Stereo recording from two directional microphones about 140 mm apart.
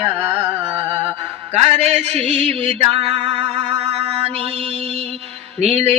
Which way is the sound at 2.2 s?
10° left (ahead or behind).